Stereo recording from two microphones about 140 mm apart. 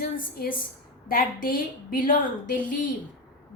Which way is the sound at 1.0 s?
90° left.